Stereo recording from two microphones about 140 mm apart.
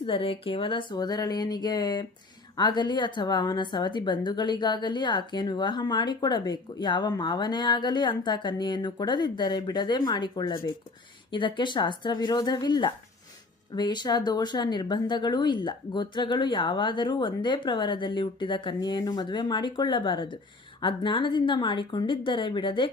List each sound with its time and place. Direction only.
0.0 s a woman's voice: 40° left (ahead or behind)